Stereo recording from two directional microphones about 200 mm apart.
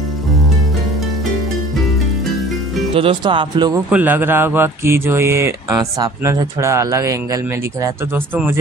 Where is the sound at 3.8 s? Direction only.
10° right (ahead or behind).